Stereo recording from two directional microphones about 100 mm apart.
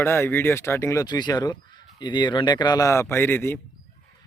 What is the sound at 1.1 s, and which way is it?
A man's voice, 45° left (ahead or behind).